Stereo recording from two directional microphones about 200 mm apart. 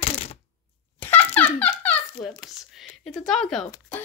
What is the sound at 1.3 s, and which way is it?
Dog, 5° left (ahead or behind).